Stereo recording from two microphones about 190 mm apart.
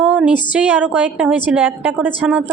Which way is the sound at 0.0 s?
5° right (ahead or behind).